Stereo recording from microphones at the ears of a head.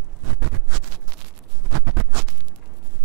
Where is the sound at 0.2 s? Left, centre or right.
Right.